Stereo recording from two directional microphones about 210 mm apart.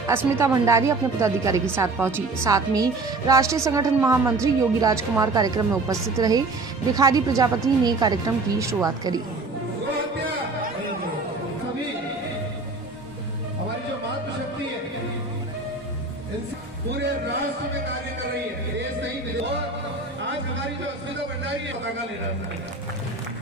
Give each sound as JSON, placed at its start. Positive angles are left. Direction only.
{"t": 0.4, "sound": "a woman's voice", "side_deg": -15}